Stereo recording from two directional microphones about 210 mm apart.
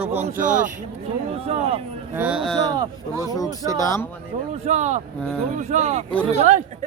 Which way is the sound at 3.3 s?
15° left (ahead or behind).